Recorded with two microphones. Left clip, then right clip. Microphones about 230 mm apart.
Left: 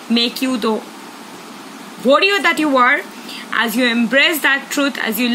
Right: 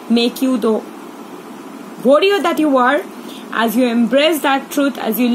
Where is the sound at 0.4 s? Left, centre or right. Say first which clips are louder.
Right 2 dB; left.